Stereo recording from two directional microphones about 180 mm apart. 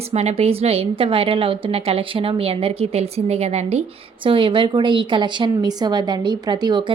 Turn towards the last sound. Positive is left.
turn(degrees=-25)  # may be behind; listen again after turning